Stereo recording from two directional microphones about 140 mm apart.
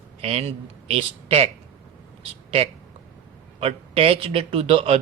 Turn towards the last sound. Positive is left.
turn(degrees=-45)  # may be behind; listen again after turning